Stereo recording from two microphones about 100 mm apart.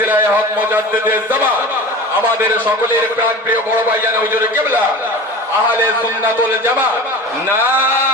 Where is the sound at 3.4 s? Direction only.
20° right (ahead or behind).